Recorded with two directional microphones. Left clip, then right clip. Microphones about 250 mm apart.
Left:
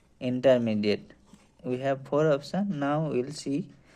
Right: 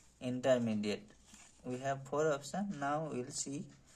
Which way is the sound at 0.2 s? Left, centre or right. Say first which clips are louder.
Left 10 dB; left.